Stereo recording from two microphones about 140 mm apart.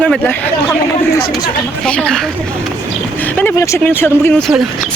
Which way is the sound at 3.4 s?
20° left (ahead or behind).